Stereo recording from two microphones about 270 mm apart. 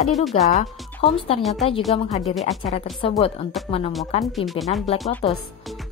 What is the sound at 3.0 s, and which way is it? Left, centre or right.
Speech, left.